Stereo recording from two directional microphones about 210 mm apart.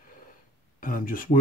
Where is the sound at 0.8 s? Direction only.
40° left (ahead or behind).